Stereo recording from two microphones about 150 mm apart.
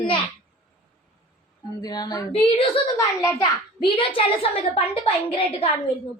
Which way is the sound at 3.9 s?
40° left (ahead or behind).